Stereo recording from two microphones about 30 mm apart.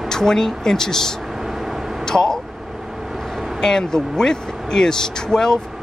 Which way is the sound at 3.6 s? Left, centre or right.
Centre.